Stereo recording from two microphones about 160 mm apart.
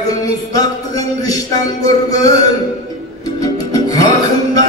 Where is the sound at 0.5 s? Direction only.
25° left (ahead or behind).